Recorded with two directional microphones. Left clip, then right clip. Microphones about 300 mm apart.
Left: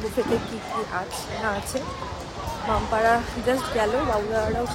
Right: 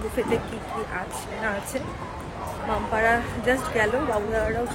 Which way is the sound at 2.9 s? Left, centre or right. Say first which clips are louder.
Left 1 dB; centre.